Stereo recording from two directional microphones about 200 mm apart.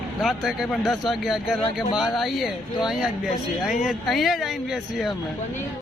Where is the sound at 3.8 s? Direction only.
Centre (ahead or behind).